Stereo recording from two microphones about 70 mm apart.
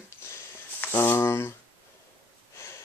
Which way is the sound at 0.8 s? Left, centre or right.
Left.